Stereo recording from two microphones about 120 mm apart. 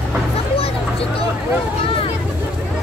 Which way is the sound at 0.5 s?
55° left (ahead or behind).